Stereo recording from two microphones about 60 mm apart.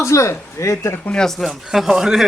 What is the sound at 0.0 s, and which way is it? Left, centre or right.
Speech, left.